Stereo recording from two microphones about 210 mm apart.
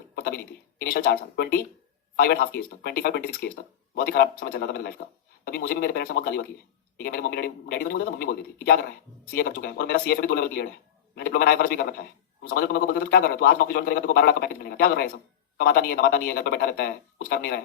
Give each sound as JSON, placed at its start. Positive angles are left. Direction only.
{"t": 0.2, "sound": "a man's voice", "side_deg": 45}